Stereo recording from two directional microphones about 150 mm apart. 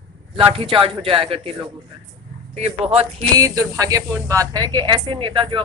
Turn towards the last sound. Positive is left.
turn(degrees=-35)  # may be behind; listen again after turning